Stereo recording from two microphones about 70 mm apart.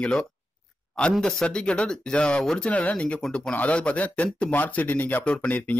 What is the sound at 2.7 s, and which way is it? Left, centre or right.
Speech, left.